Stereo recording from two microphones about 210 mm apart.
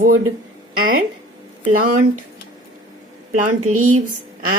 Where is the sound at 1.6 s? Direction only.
35° right (ahead or behind).